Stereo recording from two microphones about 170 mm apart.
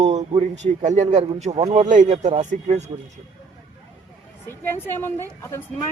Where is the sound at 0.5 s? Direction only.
45° right (ahead or behind).